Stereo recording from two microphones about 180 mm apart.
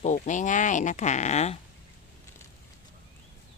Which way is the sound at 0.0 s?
45° left (ahead or behind).